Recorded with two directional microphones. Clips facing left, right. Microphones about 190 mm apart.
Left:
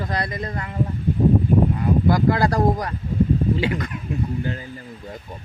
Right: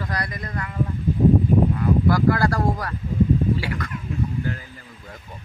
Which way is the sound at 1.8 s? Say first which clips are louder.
Left 1 dB; 20° left (ahead or behind).